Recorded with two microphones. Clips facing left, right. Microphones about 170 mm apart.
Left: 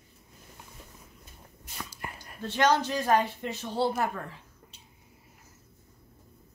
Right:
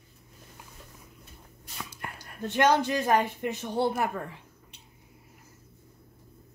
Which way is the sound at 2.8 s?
15° right (ahead or behind).